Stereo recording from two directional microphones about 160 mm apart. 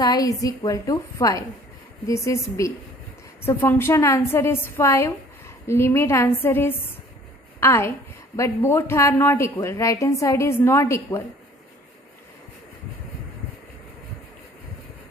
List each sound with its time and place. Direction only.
0.0 s a woman's voice: 25° left (ahead or behind)